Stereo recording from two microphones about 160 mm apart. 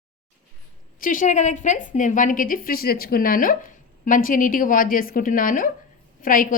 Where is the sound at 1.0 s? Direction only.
55° left (ahead or behind).